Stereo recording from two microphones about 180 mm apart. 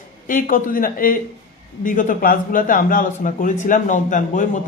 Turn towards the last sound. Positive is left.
turn(degrees=45)  # may be behind; listen again after turning